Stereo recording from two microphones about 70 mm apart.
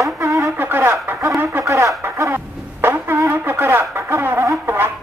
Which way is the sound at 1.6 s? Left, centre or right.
Right.